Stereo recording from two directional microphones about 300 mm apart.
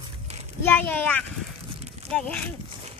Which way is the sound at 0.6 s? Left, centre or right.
Centre.